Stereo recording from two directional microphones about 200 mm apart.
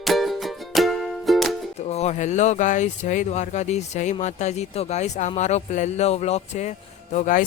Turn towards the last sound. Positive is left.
turn(degrees=40)  # may be behind; listen again after turning